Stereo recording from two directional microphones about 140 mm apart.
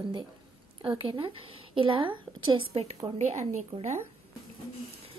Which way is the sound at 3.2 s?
55° right (ahead or behind).